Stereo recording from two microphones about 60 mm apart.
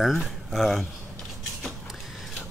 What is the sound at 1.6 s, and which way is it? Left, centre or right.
Mechanisms, centre.